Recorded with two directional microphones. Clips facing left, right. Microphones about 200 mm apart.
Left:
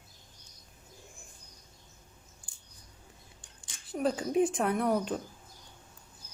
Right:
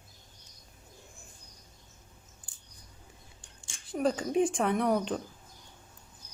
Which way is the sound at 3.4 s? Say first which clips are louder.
Right 1 dB; 25° right (ahead or behind).